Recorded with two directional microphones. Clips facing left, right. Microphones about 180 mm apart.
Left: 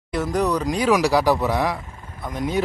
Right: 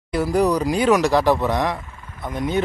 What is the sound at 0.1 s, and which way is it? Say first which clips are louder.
Speech: right 3 dB; 5° right (ahead or behind).